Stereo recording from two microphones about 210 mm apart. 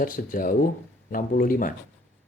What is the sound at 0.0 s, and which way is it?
Speech, 40° left (ahead or behind).